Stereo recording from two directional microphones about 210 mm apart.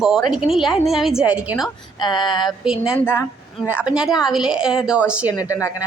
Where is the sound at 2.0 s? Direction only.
20° left (ahead or behind).